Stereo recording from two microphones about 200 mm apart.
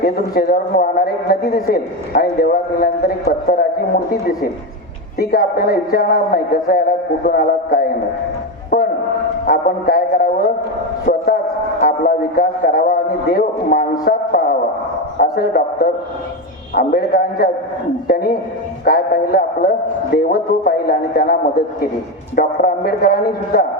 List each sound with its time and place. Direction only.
0.0 s a man's voice: 50° left (ahead or behind)
5.3 s a man's voice: 50° left (ahead or behind)
8.7 s a sound: 45° left (ahead or behind)
9.5 s music: 50° left (ahead or behind)
11.0 s a sound: 45° left (ahead or behind)
11.8 s a man's voice: 45° left (ahead or behind)